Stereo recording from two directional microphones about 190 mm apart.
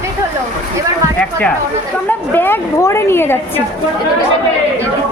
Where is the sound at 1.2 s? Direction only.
5° left (ahead or behind).